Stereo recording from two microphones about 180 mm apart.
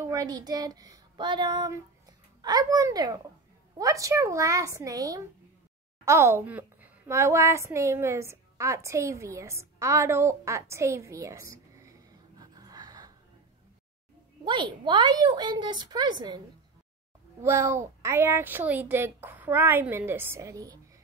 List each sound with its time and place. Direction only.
0.0 s a woman's voice: 20° right (ahead or behind)
11.8 s a sound: 20° right (ahead or behind)
14.4 s a woman's voice: 25° right (ahead or behind)
17.4 s a woman's voice: 15° right (ahead or behind)